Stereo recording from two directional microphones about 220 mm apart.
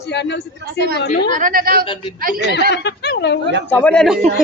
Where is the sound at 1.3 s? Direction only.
40° right (ahead or behind).